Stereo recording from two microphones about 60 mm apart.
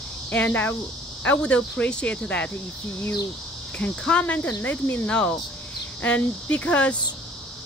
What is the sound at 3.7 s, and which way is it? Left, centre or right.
Speech, left.